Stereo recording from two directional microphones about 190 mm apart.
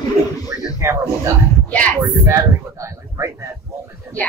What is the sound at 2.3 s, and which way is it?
Speech, 15° right (ahead or behind).